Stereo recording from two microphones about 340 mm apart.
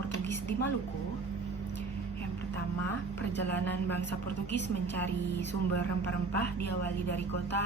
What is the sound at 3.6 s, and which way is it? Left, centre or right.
A woman's voice, left.